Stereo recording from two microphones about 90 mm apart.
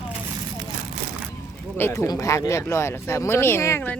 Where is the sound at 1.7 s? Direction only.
25° left (ahead or behind).